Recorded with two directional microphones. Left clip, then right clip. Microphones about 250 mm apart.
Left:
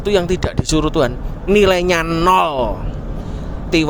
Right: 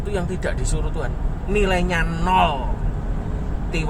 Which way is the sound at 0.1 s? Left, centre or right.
Left.